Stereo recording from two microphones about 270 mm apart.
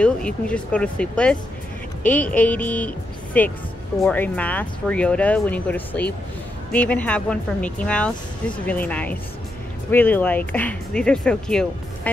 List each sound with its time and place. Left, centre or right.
0.0 s speech: centre